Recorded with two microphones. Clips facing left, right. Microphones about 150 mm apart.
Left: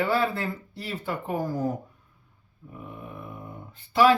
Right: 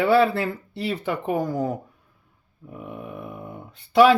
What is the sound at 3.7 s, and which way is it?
Speech, 70° right (ahead or behind).